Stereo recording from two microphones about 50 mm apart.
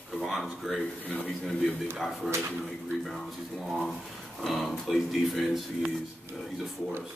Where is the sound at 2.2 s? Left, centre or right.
Right.